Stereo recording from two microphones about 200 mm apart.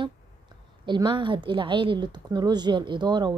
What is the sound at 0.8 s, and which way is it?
A woman's voice, 25° right (ahead or behind).